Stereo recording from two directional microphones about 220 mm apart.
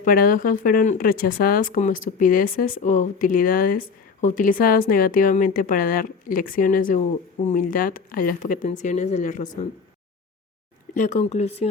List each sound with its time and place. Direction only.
0.0 s speech: 40° left (ahead or behind)
11.0 s speech: 30° left (ahead or behind)